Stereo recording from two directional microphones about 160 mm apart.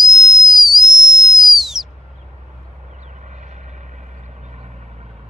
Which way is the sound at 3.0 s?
50° right (ahead or behind).